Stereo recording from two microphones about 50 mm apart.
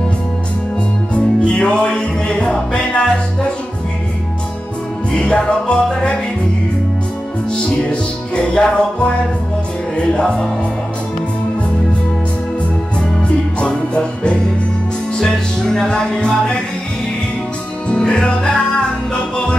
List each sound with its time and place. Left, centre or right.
1.1 s music: left
5.1 s music: centre
7.5 s music: left
13.2 s music: left
17.8 s music: centre